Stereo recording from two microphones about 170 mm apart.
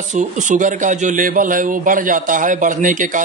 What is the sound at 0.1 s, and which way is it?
Speech, 45° right (ahead or behind).